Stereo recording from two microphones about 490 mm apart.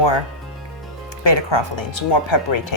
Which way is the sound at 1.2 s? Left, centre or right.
Left.